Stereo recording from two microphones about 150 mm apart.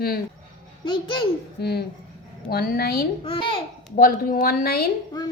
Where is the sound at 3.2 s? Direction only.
35° left (ahead or behind).